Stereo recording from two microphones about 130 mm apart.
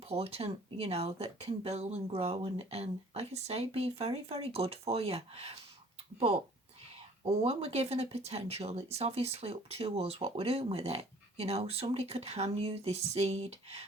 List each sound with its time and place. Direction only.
0.1 s speech: 50° right (ahead or behind)